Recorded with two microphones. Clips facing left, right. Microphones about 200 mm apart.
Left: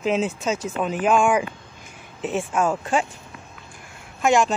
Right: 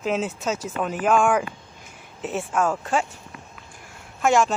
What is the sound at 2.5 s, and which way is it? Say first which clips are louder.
Speech: even; 15° left (ahead or behind).